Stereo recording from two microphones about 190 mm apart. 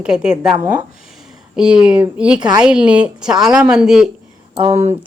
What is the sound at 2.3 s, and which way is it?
Speech, 20° right (ahead or behind).